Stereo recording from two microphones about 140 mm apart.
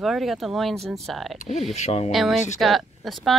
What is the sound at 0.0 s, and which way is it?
Speech, centre (ahead or behind).